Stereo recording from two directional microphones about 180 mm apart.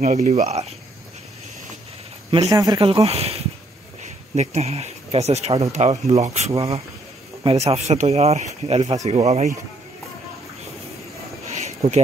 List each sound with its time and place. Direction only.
0.0 s speech: 40° right (ahead or behind)
2.5 s speech: 20° right (ahead or behind); by 9.5 s 35° right (ahead or behind)
11.4 s a sound: 40° right (ahead or behind)